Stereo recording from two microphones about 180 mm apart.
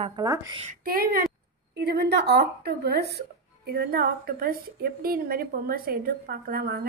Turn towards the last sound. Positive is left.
turn(degrees=-55)  # may be behind; listen again after turning